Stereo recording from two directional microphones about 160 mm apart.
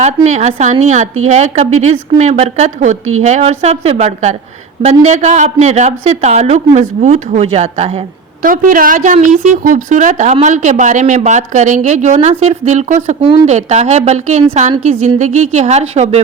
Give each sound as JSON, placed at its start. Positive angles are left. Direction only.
{"t": 0.0, "sound": "a woman's voice", "side_deg": -45}
{"t": 8.4, "sound": "a woman's voice", "side_deg": -60}